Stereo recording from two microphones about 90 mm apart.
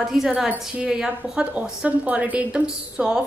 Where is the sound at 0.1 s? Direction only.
5° right (ahead or behind).